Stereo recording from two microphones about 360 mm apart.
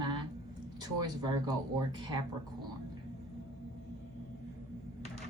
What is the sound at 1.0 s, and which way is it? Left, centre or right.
A woman's voice, centre.